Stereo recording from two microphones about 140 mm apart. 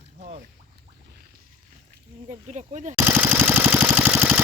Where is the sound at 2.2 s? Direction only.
55° right (ahead or behind).